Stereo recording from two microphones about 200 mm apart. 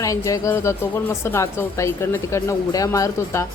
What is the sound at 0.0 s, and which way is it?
A woman's voice, 15° left (ahead or behind).